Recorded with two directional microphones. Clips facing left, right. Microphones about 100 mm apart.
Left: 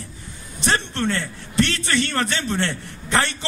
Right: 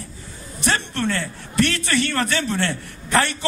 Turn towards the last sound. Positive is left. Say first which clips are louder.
# right 2 dB
turn(degrees=25)  # may be behind; listen again after turning